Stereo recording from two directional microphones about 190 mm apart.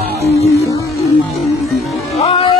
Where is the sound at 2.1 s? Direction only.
30° left (ahead or behind).